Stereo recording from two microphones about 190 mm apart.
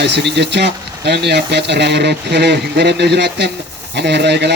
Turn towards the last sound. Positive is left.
turn(degrees=-60)  # may be behind; listen again after turning